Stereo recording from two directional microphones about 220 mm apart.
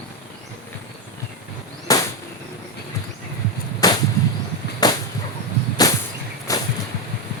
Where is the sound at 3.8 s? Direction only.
15° left (ahead or behind).